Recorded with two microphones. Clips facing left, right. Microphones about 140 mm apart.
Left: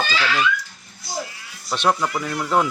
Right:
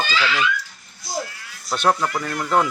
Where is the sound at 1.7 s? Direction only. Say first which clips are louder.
Right 1 dB; centre (ahead or behind).